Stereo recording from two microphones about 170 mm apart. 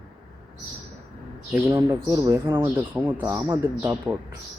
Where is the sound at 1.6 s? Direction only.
15° right (ahead or behind).